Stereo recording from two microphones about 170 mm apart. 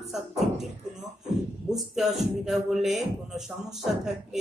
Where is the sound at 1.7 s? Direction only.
Centre (ahead or behind).